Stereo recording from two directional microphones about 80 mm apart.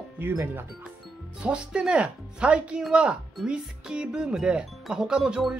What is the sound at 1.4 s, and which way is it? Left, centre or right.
Speech, centre.